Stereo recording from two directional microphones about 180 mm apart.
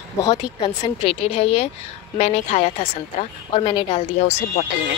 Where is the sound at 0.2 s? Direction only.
20° left (ahead or behind).